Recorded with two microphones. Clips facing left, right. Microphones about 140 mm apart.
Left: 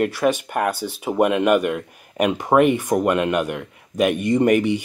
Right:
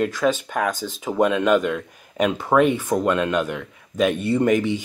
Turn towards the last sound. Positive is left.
turn(degrees=10)  # may be behind; listen again after turning